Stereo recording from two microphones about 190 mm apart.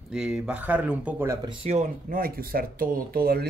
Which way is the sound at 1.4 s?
30° right (ahead or behind).